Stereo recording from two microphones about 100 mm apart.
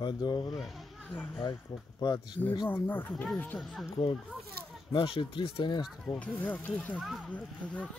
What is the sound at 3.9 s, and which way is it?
A child's voice, 60° left (ahead or behind).